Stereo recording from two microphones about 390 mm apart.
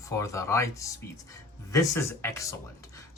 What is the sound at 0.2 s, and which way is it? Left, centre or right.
Speech, centre.